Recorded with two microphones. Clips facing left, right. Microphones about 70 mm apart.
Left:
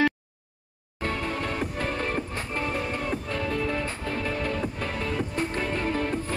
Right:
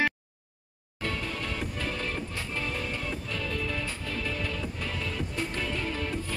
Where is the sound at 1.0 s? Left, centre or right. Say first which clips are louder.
Left 4 dB; left.